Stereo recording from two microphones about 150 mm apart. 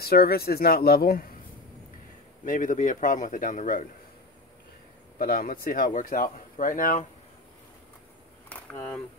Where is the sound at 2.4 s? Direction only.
60° left (ahead or behind).